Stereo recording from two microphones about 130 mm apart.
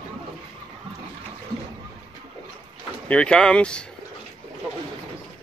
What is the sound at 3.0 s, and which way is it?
Speech, 10° left (ahead or behind).